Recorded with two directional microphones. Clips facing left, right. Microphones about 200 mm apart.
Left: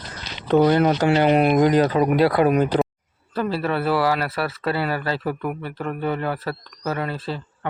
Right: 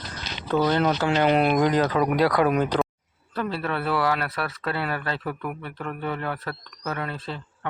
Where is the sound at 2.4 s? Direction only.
10° left (ahead or behind).